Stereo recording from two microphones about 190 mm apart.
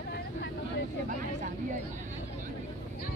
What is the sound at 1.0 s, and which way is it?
Vehicle, 40° right (ahead or behind).